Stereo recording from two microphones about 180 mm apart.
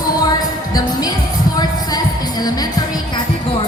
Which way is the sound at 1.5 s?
20° left (ahead or behind).